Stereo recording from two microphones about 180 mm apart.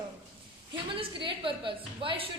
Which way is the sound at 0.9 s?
30° right (ahead or behind).